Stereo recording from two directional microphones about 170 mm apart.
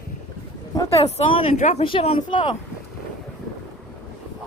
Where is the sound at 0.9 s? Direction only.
40° left (ahead or behind).